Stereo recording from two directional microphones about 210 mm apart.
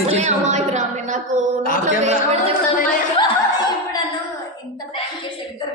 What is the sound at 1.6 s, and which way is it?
Speech, 40° left (ahead or behind).